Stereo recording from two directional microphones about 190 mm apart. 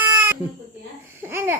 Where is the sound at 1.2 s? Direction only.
10° right (ahead or behind).